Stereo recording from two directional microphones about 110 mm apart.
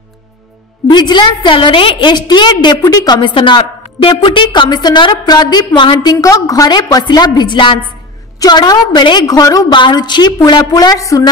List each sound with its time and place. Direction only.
0.8 s a woman's voice: 40° left (ahead or behind)
6.2 s a woman's voice: 30° left (ahead or behind)